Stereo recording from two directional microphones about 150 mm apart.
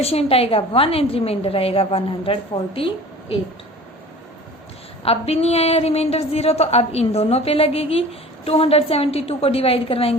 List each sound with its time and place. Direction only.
0.0 s a woman's voice: 40° left (ahead or behind)
5.0 s a woman's voice: 40° left (ahead or behind)